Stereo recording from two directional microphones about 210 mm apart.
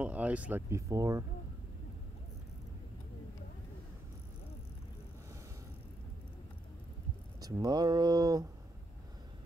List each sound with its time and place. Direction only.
0.0 s speech: 5° right (ahead or behind)
7.3 s speech: 20° right (ahead or behind)